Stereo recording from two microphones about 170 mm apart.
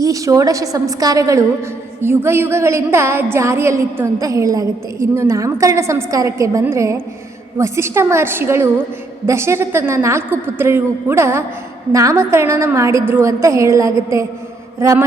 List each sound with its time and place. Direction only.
0.0 s a woman's voice: 20° right (ahead or behind)